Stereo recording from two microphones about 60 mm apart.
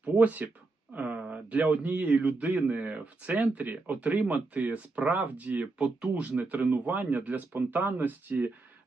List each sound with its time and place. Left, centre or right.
0.0 s speech: right